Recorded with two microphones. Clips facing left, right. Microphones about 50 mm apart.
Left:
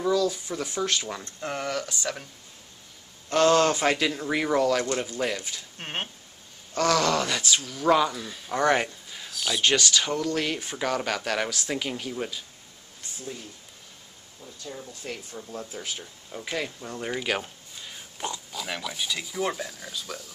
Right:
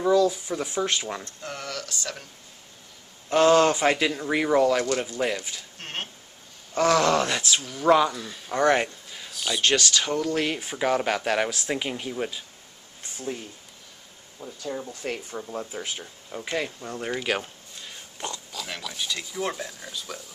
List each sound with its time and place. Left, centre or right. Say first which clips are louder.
0.0 s speech: right 4 dB; centre
1.2 s speech: left 4 dB; left
3.3 s speech: right 2 dB; centre
5.8 s speech: left 2 dB; centre
6.7 s speech: right 3 dB; centre
14.7 s speech: right 6 dB; right
15.7 s speech: right 2 dB; centre